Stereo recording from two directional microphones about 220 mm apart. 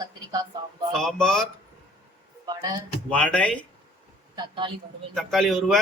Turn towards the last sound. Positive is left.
turn(degrees=0)  # may be behind; listen again after turning